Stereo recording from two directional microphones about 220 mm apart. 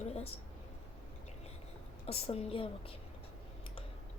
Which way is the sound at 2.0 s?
25° left (ahead or behind).